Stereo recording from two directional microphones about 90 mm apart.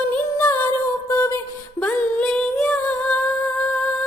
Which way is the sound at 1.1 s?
35° left (ahead or behind).